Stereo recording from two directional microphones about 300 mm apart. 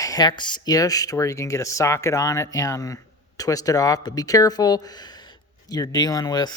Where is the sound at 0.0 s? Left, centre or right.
Centre.